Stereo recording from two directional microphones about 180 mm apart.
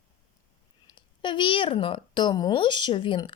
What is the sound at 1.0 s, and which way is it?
Speech, 25° left (ahead or behind).